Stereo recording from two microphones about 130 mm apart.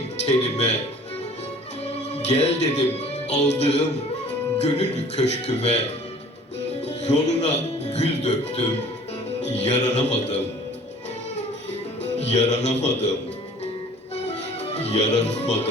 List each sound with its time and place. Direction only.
0.3 s speech: 55° left (ahead or behind)
1.9 s speech: 55° left (ahead or behind)
6.8 s music: 55° left (ahead or behind)
9.6 s speech: 60° left (ahead or behind)
12.2 s speech: 60° left (ahead or behind)
14.3 s music: 55° left (ahead or behind)